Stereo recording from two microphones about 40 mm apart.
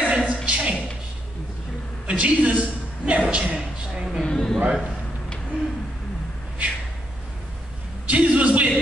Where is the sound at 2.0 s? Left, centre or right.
Right.